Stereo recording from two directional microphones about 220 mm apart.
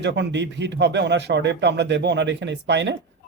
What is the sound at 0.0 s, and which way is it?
Speech, 50° right (ahead or behind).